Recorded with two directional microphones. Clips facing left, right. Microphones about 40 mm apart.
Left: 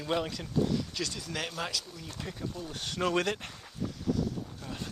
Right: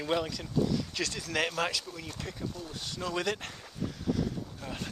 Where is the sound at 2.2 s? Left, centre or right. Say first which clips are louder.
Left 2 dB; centre.